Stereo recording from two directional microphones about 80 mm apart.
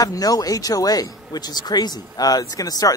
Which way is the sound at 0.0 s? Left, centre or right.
Left.